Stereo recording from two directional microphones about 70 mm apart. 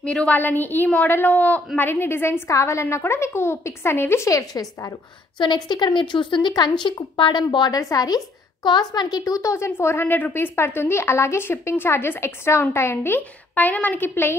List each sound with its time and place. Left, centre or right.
0.0 s a woman's voice: centre
0.4 s a woman's voice: left
1.8 s a woman's voice: left
4.3 s a woman's voice: left
5.5 s speech: left
7.8 s a woman's voice: left
8.6 s a woman's voice: left